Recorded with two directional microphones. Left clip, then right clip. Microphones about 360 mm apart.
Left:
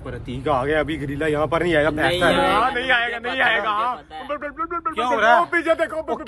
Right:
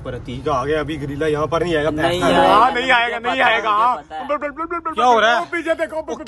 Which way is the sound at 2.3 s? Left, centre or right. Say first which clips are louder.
Right 6 dB; centre.